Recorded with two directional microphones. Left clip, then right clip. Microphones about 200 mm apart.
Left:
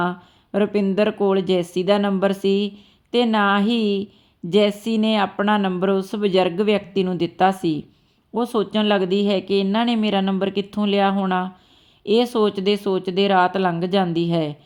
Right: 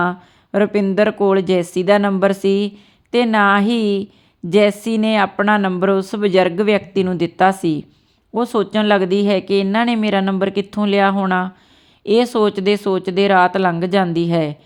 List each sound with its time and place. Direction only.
0.0 s a woman's voice: 20° right (ahead or behind)